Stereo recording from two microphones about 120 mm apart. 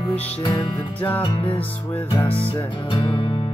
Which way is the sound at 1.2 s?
45° left (ahead or behind).